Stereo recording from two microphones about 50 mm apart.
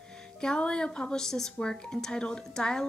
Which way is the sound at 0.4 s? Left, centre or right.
Centre.